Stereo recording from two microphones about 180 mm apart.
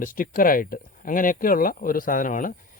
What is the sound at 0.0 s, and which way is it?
Speech, 50° left (ahead or behind).